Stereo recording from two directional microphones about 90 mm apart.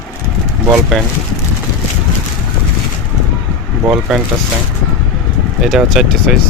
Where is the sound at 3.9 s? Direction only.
10° right (ahead or behind).